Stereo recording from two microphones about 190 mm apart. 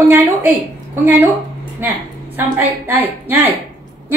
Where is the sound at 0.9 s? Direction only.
10° right (ahead or behind).